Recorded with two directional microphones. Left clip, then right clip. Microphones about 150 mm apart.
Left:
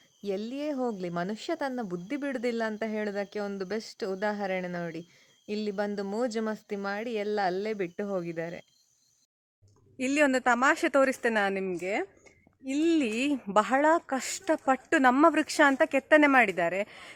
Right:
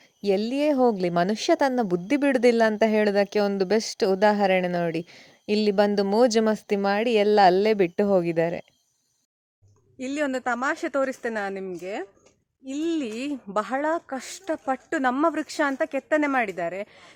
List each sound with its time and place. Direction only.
0.2 s speech: 45° right (ahead or behind)
10.0 s speech: 20° left (ahead or behind)